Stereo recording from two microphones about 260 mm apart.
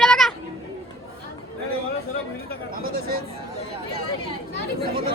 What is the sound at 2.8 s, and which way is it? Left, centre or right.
Speech, right.